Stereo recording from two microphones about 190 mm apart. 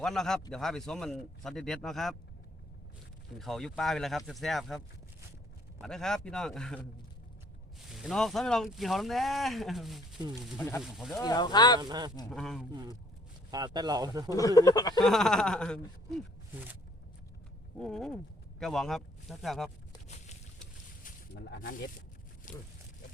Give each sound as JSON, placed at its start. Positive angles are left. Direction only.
{"t": 0.0, "sound": "speech", "side_deg": 0}
{"t": 3.3, "sound": "speech", "side_deg": 0}
{"t": 5.8, "sound": "speech", "side_deg": 5}
{"t": 7.9, "sound": "speech", "side_deg": 0}
{"t": 11.2, "sound": "speech", "side_deg": 20}
{"t": 11.8, "sound": "speech", "side_deg": -20}
{"t": 12.3, "sound": "speech", "side_deg": 0}
{"t": 13.5, "sound": "speech", "side_deg": -20}
{"t": 14.3, "sound": "speech", "side_deg": 20}
{"t": 15.0, "sound": "speech", "side_deg": 5}
{"t": 17.7, "sound": "speech", "side_deg": 5}
{"t": 21.0, "sound": "speech", "side_deg": 60}
{"t": 22.5, "sound": "a sound", "side_deg": 45}